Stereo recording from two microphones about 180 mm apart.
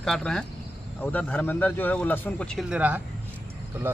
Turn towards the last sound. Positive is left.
turn(degrees=-5)  # may be behind; listen again after turning